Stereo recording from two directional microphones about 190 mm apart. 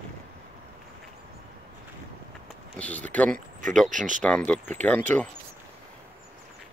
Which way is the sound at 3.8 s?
40° right (ahead or behind).